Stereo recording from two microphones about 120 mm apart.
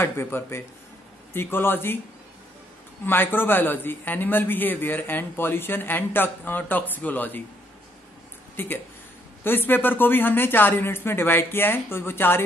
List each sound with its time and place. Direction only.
0.0 s a man's voice: 20° left (ahead or behind)
3.1 s a man's voice: 15° left (ahead or behind)
8.5 s a man's voice: 15° left (ahead or behind)